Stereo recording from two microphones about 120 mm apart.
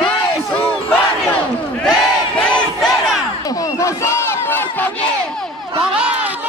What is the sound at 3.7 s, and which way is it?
Battle cry, 25° left (ahead or behind).